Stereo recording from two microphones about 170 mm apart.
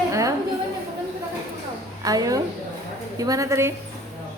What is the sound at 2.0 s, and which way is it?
A woman's voice, 20° right (ahead or behind).